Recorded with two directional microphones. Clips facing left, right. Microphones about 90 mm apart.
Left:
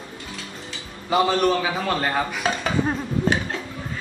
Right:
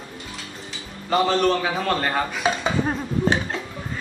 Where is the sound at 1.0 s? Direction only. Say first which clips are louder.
Even; 10° left (ahead or behind).